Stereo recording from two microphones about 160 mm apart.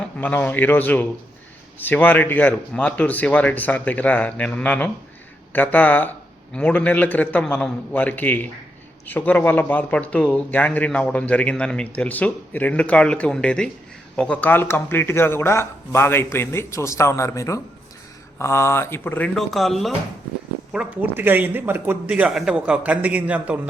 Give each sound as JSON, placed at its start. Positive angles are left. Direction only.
{"t": 0.2, "sound": "a man's voice", "side_deg": 10}
{"t": 20.7, "sound": "a man's voice", "side_deg": -10}